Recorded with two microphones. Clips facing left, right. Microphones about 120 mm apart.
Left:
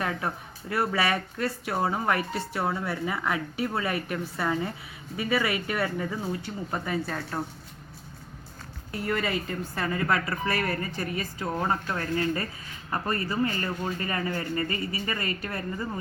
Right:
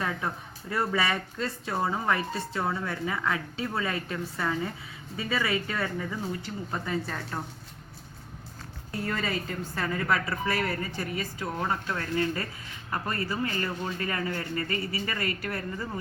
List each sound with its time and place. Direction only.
0.0 s speech: 15° left (ahead or behind)
9.0 s a woman's voice: 10° left (ahead or behind); by 11.5 s 5° right (ahead or behind)
11.6 s speech: 10° left (ahead or behind)